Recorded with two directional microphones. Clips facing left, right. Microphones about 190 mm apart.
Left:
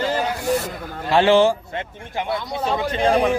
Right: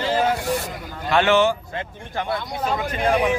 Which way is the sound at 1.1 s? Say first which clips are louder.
Left 3 dB; 30° left (ahead or behind).